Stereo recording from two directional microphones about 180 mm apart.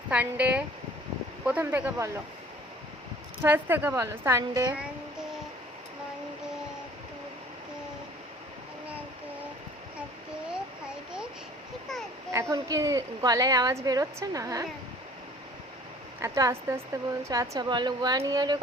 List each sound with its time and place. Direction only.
0.1 s a woman's voice: 10° right (ahead or behind)
3.4 s a woman's voice: 10° right (ahead or behind)
12.3 s speech: 15° right (ahead or behind)
16.2 s speech: 15° right (ahead or behind)